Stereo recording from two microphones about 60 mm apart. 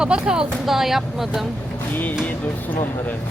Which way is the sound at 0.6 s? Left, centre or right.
Centre.